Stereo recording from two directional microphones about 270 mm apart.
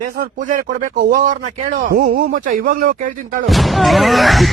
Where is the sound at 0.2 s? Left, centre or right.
Right.